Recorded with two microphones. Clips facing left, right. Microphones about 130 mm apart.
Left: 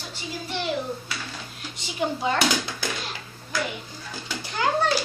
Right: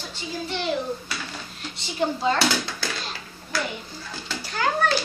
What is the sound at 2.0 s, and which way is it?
Speech, 15° left (ahead or behind).